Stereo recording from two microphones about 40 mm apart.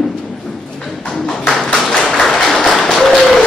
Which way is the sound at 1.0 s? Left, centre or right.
Centre.